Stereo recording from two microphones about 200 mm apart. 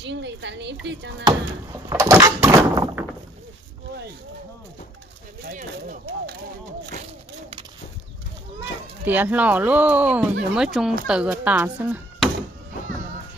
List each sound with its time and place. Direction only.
0.0 s a woman's voice: 60° right (ahead or behind)
1.2 s door: 15° right (ahead or behind)
5.4 s speech: 40° right (ahead or behind)
8.5 s speech: 10° right (ahead or behind)
11.1 s door: 5° right (ahead or behind)